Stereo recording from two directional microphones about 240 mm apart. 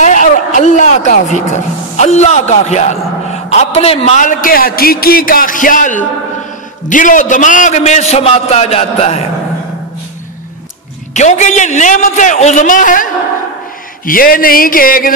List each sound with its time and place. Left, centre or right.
0.0 s a man's voice: left
11.1 s a man's voice: left